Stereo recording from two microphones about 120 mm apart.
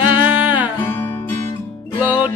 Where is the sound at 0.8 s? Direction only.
15° left (ahead or behind).